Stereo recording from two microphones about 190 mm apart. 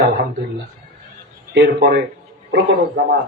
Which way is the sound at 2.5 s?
60° right (ahead or behind).